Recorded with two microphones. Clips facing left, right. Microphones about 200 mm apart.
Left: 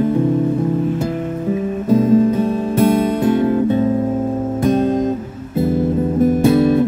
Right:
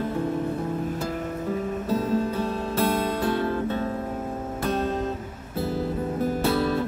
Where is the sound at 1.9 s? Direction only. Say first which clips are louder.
Left 13 dB; 15° left (ahead or behind).